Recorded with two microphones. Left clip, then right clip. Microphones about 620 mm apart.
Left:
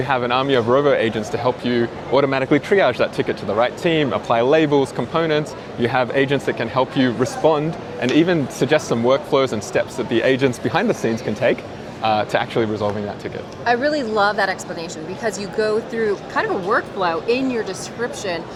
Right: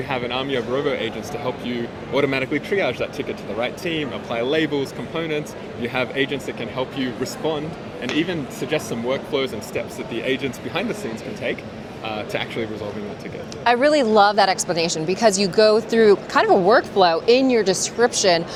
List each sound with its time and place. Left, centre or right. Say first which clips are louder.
0.1 s speech: left 6 dB; left
13.7 s speech: right 3 dB; right